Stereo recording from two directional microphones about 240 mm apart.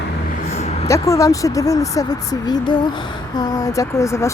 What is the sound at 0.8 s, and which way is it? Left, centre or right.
Speech, centre.